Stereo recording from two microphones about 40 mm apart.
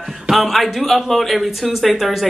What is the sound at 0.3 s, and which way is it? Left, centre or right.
A woman's voice, centre.